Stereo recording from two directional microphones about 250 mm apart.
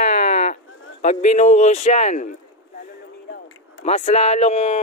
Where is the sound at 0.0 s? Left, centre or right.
Left.